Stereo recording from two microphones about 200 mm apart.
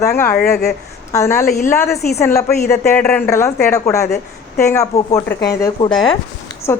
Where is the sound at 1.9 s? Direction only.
50° left (ahead or behind).